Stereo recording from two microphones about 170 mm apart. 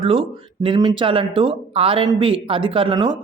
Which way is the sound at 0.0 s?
30° right (ahead or behind).